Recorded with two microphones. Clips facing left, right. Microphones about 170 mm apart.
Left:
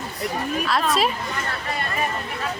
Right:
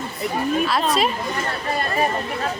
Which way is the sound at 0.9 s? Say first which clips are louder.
Right 1 dB; centre (ahead or behind).